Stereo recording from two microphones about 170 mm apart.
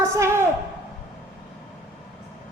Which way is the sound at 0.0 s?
15° right (ahead or behind).